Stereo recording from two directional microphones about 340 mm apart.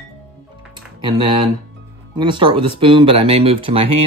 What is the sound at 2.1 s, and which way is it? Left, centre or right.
Speech, centre.